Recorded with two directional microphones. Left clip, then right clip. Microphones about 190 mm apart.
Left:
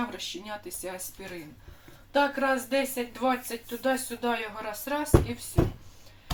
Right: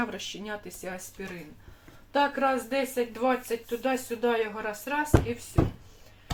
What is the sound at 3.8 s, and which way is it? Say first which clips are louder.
Speech: left 1 dB; 25° right (ahead or behind).